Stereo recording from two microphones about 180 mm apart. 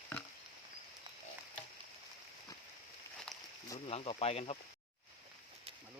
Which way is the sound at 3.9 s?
35° left (ahead or behind).